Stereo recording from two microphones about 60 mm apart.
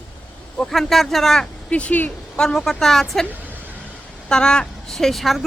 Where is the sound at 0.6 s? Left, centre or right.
Centre.